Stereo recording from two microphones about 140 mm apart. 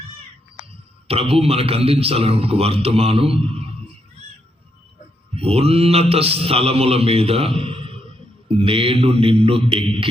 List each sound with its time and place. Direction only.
1.0 s a man's voice: 45° right (ahead or behind)
5.3 s a man's voice: 45° right (ahead or behind)
8.5 s mantra: 40° right (ahead or behind)